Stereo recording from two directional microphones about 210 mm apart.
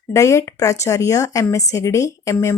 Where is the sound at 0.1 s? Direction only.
15° left (ahead or behind).